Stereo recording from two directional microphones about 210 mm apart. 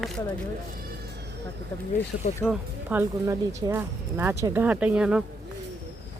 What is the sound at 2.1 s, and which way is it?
Speech, 60° left (ahead or behind).